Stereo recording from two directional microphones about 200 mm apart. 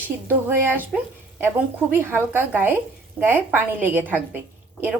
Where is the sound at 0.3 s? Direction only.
10° right (ahead or behind).